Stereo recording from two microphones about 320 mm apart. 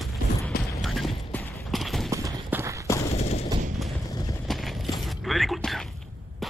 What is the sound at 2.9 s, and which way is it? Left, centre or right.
Gunshot, centre.